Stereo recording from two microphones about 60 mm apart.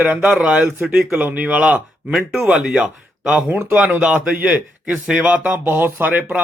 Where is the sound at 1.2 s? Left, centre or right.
Right.